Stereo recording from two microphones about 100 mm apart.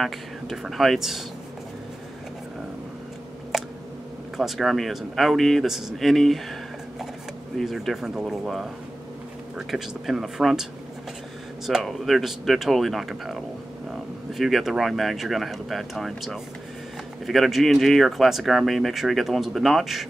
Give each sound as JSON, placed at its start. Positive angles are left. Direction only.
{"t": 0.0, "sound": "speech", "side_deg": 0}
{"t": 3.5, "sound": "a sound", "side_deg": 0}
{"t": 4.4, "sound": "speech", "side_deg": 0}
{"t": 7.5, "sound": "speech", "side_deg": 0}